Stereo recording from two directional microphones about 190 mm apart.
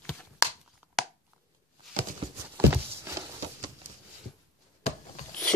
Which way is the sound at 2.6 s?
15° right (ahead or behind).